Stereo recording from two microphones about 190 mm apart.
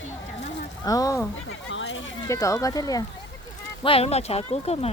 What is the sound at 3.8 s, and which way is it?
Speech, 30° left (ahead or behind).